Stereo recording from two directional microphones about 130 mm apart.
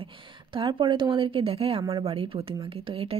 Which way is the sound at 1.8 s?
30° right (ahead or behind).